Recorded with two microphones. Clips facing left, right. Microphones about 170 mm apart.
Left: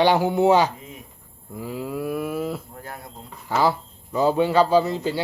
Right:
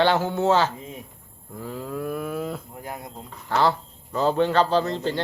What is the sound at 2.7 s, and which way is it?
Speech, 15° right (ahead or behind).